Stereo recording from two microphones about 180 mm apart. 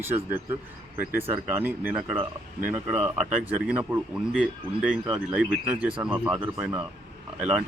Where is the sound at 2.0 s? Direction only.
30° right (ahead or behind).